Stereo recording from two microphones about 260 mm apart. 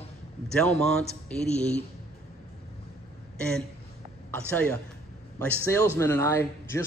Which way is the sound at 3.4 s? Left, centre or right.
Centre.